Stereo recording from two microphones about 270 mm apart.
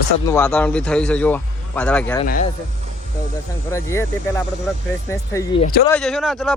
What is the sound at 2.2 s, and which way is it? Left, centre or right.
Speech, left.